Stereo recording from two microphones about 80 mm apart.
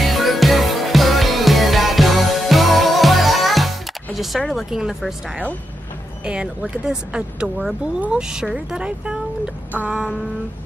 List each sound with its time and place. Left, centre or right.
0.0 s music: centre
4.6 s speech: centre
6.2 s speech: centre
9.7 s a sound: centre